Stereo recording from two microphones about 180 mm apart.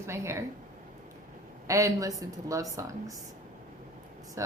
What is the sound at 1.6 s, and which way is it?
A woman's voice, 20° right (ahead or behind).